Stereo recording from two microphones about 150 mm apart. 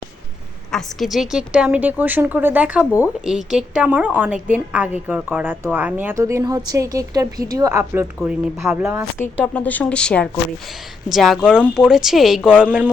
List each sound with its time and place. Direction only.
0.7 s a woman's voice: centre (ahead or behind); by 8.0 s 20° right (ahead or behind)
8.2 s speech: 5° right (ahead or behind)
9.4 s speech: 10° left (ahead or behind); by 12.9 s 10° right (ahead or behind)